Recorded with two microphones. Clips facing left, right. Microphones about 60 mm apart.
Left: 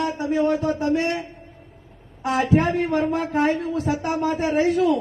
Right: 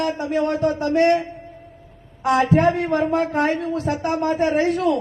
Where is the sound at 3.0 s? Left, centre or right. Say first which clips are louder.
Right 2 dB; right.